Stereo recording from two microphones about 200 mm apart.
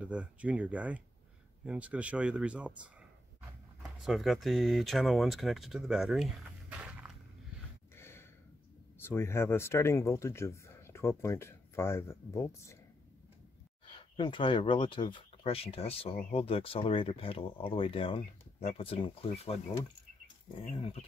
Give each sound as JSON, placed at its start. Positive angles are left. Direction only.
{"t": 0.0, "sound": "speech", "side_deg": -5}
{"t": 4.0, "sound": "speech", "side_deg": 0}
{"t": 7.9, "sound": "gasp", "side_deg": 10}
{"t": 9.0, "sound": "speech", "side_deg": 10}
{"t": 13.9, "sound": "speech", "side_deg": 25}
{"t": 20.7, "sound": "speech", "side_deg": 30}